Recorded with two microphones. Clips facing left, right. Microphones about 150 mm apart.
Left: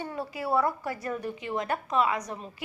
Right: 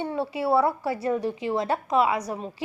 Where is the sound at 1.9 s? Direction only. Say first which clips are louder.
Right 4 dB; 10° right (ahead or behind).